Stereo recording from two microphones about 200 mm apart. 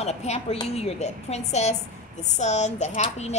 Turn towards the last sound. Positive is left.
turn(degrees=35)  # may be behind; listen again after turning